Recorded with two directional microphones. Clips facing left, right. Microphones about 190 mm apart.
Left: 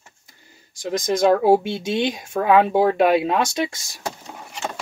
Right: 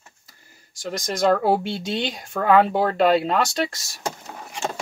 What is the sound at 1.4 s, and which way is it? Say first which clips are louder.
Speech: left 5 dB; 20° left (ahead or behind).